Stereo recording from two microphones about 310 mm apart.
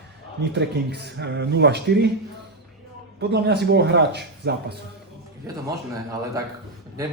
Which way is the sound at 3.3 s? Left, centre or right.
Right.